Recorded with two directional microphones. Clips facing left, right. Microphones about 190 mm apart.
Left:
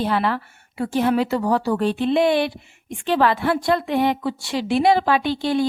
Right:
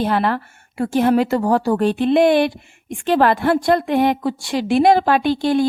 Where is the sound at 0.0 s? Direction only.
50° right (ahead or behind).